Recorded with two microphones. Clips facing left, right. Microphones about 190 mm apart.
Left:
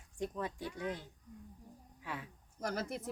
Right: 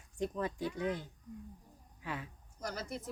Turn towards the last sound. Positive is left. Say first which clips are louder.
# left 3 dB
turn(degrees=55)  # may be behind; listen again after turning